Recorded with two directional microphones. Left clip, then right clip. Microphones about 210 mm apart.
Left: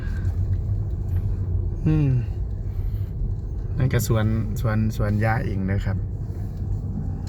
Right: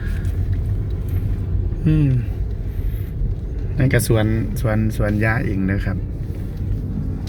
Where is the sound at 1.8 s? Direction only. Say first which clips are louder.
Right 4 dB; 25° left (ahead or behind).